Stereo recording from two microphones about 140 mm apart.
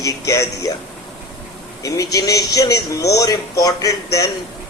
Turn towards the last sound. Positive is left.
turn(degrees=25)  # may be behind; listen again after turning